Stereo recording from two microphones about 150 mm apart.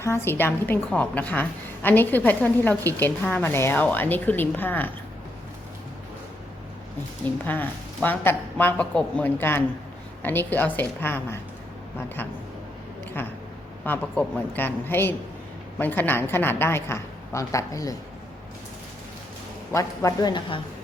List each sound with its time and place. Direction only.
0.0 s a woman's voice: 15° left (ahead or behind)
7.4 s a woman's voice: 10° left (ahead or behind)
19.7 s speech: 20° left (ahead or behind)